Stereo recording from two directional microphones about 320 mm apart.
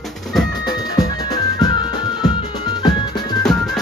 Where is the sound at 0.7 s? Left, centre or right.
Centre.